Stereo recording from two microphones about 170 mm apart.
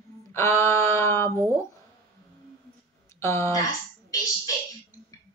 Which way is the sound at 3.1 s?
15° left (ahead or behind).